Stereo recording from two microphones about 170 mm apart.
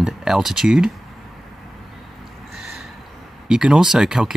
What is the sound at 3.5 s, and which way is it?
Speech, 5° right (ahead or behind).